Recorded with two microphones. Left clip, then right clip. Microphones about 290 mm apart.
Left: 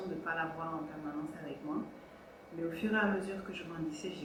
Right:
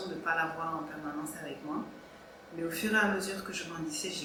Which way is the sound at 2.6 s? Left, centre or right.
Centre.